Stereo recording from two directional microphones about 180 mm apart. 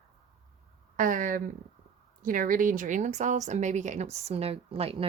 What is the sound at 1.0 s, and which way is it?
A woman's voice, 45° right (ahead or behind).